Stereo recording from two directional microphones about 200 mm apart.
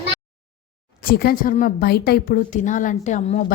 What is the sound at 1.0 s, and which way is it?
A woman's voice, 50° left (ahead or behind).